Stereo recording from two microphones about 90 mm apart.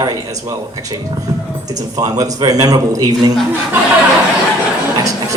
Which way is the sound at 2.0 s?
40° right (ahead or behind).